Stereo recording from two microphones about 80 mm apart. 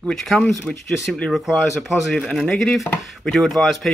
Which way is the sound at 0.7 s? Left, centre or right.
Centre.